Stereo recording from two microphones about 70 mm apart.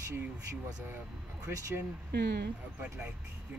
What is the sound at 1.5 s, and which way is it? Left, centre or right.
Speech, right.